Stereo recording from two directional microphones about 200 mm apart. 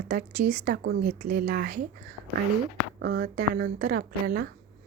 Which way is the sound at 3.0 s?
55° right (ahead or behind).